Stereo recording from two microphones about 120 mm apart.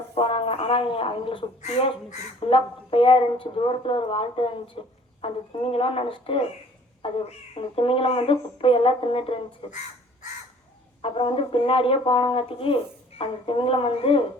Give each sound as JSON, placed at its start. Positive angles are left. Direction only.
{"t": 0.1, "sound": "speech", "side_deg": 50}
{"t": 1.6, "sound": "speech", "side_deg": 65}
{"t": 2.5, "sound": "speech", "side_deg": 50}
{"t": 11.0, "sound": "speech", "side_deg": 50}